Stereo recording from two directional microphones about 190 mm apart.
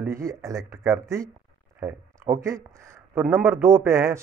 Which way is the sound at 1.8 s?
15° right (ahead or behind).